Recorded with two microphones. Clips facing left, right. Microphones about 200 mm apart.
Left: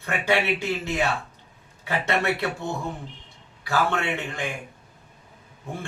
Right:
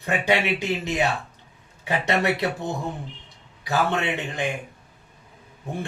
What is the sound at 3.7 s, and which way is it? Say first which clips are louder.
Speech: right 1 dB; 20° right (ahead or behind).